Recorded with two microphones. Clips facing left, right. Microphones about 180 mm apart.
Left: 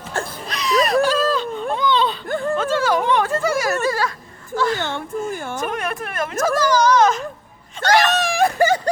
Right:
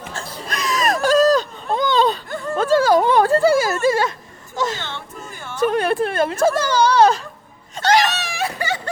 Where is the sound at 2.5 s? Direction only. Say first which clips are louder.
Right 6 dB; 40° right (ahead or behind); by 4.8 s 20° right (ahead or behind).